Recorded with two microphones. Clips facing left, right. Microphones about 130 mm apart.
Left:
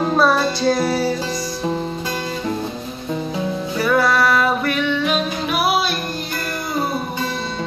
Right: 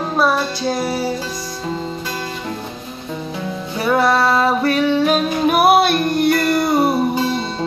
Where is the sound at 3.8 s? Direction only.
25° right (ahead or behind); by 6.8 s 75° right (ahead or behind).